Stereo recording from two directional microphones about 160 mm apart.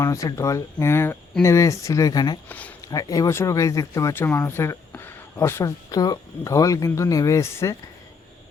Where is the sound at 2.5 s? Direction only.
10° left (ahead or behind).